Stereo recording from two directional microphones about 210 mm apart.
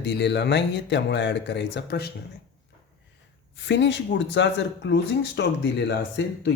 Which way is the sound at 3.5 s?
55° left (ahead or behind).